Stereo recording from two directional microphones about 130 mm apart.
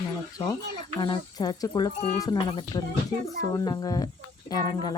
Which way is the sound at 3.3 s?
30° left (ahead or behind).